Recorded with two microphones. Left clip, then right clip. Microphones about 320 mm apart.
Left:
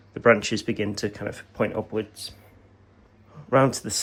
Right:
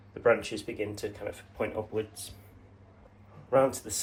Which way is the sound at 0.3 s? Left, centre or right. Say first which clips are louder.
Left 7 dB; left.